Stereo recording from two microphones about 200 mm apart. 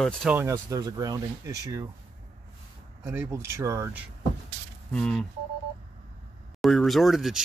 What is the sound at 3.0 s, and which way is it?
Speech, 10° right (ahead or behind).